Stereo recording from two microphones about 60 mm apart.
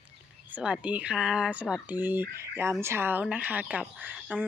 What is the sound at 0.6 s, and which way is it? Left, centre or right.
Speech, centre.